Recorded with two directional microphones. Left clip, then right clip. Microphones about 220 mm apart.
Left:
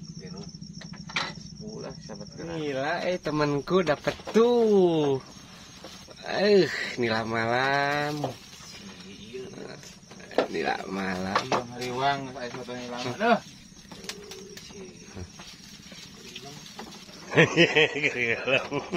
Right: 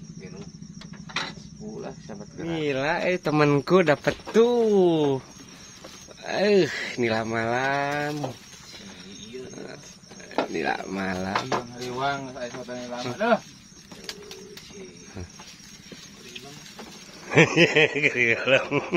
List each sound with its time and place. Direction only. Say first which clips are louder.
2.0 s speech: right 4 dB; 45° right (ahead or behind)
4.3 s speech: right 1 dB; 15° right (ahead or behind)
6.2 s speech: right 1 dB; 15° right (ahead or behind)
10.5 s speech: right 1 dB; 20° right (ahead or behind)
11.5 s speech: even; 5° left (ahead or behind)
17.3 s speech: right 2 dB; 30° right (ahead or behind)